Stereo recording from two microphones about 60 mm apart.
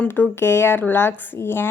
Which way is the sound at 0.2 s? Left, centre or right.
Left.